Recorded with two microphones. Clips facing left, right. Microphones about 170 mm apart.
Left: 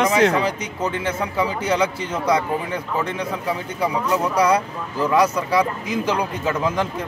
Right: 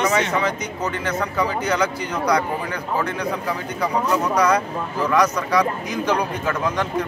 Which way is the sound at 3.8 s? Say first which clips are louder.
Even; 10° left (ahead or behind).